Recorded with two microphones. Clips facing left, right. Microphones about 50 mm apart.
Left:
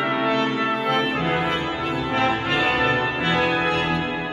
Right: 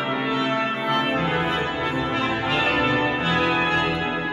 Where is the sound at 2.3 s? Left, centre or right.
Centre.